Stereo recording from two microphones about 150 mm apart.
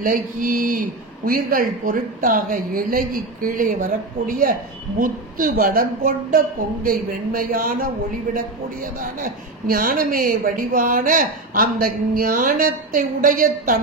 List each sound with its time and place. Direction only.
0.0 s a man's voice: 65° right (ahead or behind)
9.0 s a man's voice: 70° right (ahead or behind)